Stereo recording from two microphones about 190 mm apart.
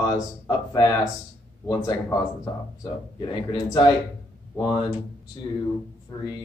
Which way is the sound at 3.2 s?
20° left (ahead or behind).